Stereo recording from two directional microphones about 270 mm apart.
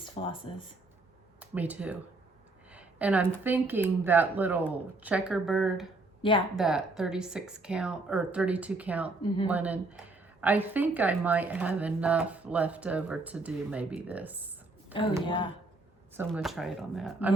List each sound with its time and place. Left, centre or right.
0.0 s speech: centre
1.4 s speech: centre
2.7 s a sound: centre
3.4 s a woman's voice: centre
15.2 s speech: centre
16.1 s a woman's voice: centre